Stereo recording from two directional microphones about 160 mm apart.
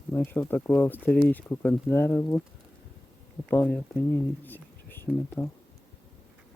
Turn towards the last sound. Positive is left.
turn(degrees=15)  # may be behind; listen again after turning